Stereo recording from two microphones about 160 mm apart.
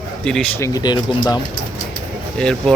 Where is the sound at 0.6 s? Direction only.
25° left (ahead or behind).